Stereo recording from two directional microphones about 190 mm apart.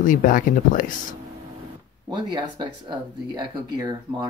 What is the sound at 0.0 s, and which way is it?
Speech, 45° left (ahead or behind).